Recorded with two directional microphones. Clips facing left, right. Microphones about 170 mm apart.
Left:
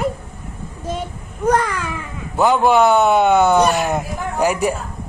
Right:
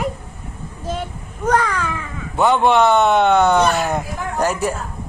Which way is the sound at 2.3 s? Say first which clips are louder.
Left 1 dB; centre (ahead or behind).